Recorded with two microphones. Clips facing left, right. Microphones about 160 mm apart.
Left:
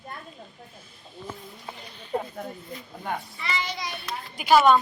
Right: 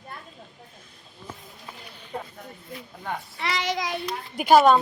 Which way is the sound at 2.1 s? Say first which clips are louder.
Left 6 dB; 20° left (ahead or behind).